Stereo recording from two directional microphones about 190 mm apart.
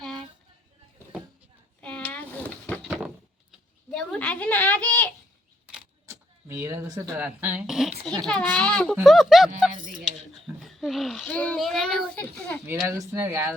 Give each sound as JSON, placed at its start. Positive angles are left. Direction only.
{"t": 1.8, "sound": "a sound", "side_deg": 5}
{"t": 6.1, "sound": "a child's voice", "side_deg": -15}
{"t": 9.7, "sound": "speech", "side_deg": -45}
{"t": 10.0, "sound": "a child's voice", "side_deg": 0}
{"t": 12.7, "sound": "speech", "side_deg": -15}